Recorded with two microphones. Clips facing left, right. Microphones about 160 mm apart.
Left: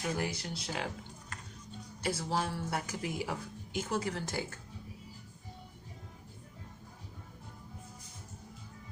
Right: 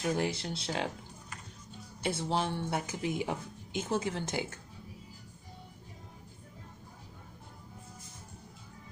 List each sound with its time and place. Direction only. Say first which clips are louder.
0.0 s speech: right 4 dB; 25° right (ahead or behind)
2.0 s speech: right 2 dB; 25° right (ahead or behind)